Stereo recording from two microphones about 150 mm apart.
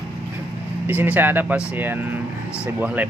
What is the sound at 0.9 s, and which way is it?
Speech, 10° right (ahead or behind).